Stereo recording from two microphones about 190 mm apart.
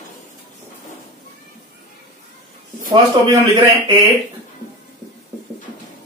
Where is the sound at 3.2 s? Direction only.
25° right (ahead or behind).